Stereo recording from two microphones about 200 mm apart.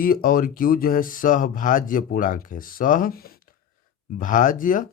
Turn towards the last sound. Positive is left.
turn(degrees=40)  # may be behind; listen again after turning